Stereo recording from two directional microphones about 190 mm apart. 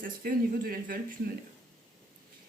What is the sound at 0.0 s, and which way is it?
Speech, 45° right (ahead or behind).